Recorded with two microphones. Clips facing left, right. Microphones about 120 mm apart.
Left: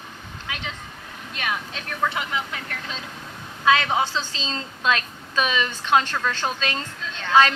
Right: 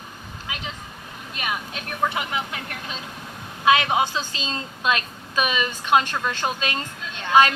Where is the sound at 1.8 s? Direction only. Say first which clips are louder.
Right 1 dB; 20° right (ahead or behind).